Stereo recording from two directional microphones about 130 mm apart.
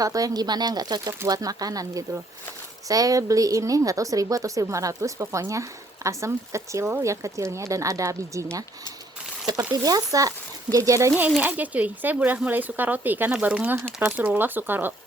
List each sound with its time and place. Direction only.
0.0 s a woman's voice: 30° right (ahead or behind)
9.7 s a woman's voice: 30° right (ahead or behind)
11.3 s speech: 10° right (ahead or behind)